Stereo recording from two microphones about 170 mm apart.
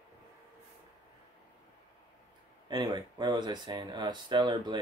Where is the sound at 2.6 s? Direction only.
25° right (ahead or behind).